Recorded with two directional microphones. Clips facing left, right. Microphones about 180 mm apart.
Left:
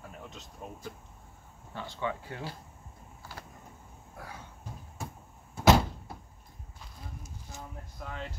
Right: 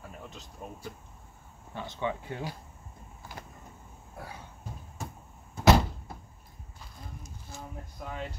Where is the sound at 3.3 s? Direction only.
15° right (ahead or behind).